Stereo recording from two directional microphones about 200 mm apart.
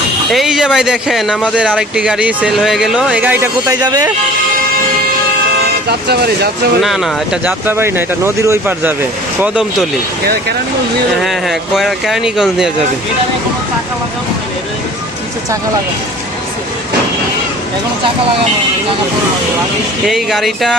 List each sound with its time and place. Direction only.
0.3 s speech: centre (ahead or behind); by 4.1 s 20° right (ahead or behind)
6.1 s speech: 50° right (ahead or behind)
6.8 s speech: centre (ahead or behind)
11.2 s speech: centre (ahead or behind)
20.1 s speech: centre (ahead or behind)